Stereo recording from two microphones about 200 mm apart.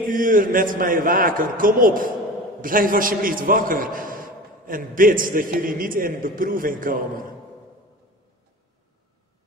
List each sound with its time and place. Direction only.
0.1 s a man's voice: 45° right (ahead or behind)